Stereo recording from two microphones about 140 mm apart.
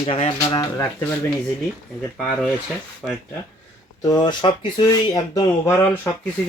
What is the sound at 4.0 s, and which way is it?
Speech, 30° left (ahead or behind).